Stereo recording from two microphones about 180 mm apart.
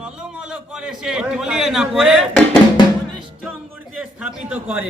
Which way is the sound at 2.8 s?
25° left (ahead or behind).